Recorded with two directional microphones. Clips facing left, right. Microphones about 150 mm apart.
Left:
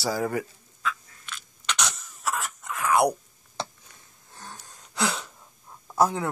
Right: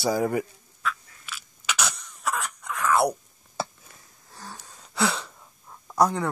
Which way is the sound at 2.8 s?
15° left (ahead or behind).